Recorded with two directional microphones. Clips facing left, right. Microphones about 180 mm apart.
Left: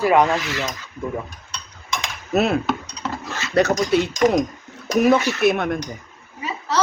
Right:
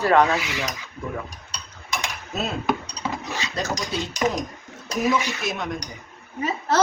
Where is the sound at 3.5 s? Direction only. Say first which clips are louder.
Left 12 dB; 65° left (ahead or behind).